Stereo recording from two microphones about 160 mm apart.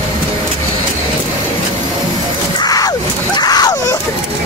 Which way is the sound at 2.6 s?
25° left (ahead or behind).